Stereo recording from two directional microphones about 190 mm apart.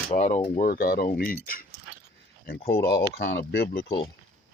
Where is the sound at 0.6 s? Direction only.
50° left (ahead or behind).